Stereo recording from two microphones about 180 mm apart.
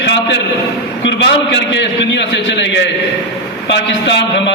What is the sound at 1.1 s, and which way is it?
A man's voice, 80° left.